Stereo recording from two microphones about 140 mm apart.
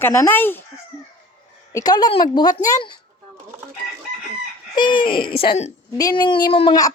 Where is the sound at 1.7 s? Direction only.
30° left (ahead or behind).